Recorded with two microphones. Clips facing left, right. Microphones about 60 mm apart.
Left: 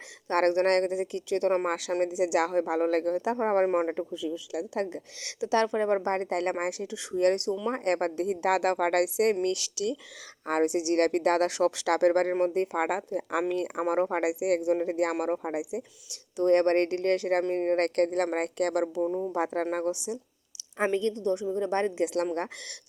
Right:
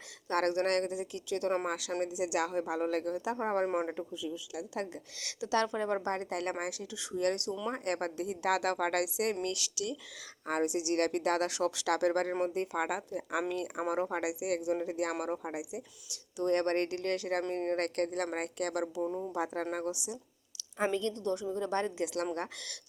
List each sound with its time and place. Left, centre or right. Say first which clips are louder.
0.3 s speech: left 6 dB; left
5.2 s a woman's voice: left 5 dB; left
10.4 s a woman's voice: left 6 dB; left
17.7 s speech: left 7 dB; left
19.0 s speech: left 6 dB; centre
19.3 s a woman's voice: left 6 dB; left
20.9 s a woman's voice: left 6 dB; left